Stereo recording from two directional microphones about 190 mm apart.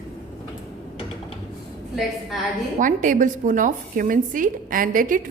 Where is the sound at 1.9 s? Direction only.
Centre (ahead or behind).